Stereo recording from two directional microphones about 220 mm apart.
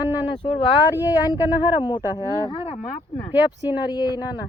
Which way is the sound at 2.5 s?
25° left (ahead or behind).